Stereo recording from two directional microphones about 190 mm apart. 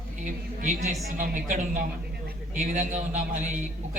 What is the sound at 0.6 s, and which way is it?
A man's voice, 40° right (ahead or behind).